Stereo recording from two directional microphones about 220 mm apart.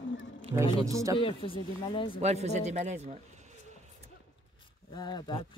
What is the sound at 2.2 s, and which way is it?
Speech, 30° right (ahead or behind).